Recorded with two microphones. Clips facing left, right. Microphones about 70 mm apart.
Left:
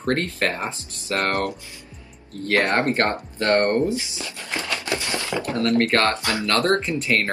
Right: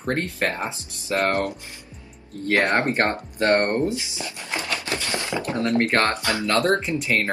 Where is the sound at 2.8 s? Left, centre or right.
Right.